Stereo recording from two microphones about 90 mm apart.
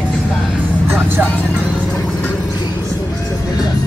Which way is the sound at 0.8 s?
25° right (ahead or behind).